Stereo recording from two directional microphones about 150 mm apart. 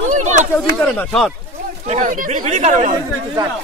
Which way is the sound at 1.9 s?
55° right (ahead or behind).